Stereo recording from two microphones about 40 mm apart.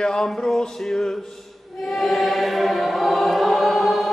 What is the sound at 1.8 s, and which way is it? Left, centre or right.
Choir, centre.